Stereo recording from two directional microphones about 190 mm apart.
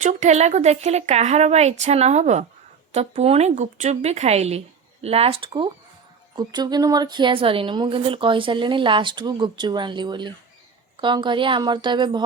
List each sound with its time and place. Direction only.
0.0 s a woman's voice: 40° right (ahead or behind); by 12.2 s 25° right (ahead or behind)